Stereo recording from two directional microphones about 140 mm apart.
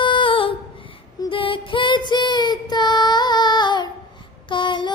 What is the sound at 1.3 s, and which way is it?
Child singing, 40° left (ahead or behind).